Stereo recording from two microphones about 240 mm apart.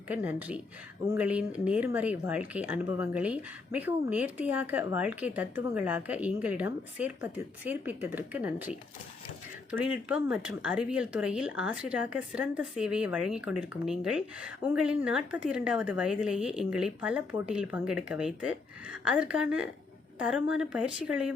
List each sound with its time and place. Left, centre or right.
0.1 s speech: centre
9.7 s speech: centre